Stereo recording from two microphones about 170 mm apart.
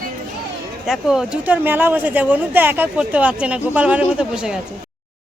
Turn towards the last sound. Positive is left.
turn(degrees=-5)  # may be behind; listen again after turning